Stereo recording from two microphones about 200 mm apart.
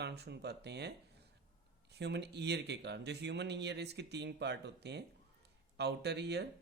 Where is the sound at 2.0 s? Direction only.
55° right (ahead or behind).